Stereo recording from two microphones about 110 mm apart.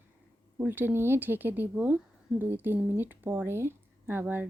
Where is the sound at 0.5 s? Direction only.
15° right (ahead or behind).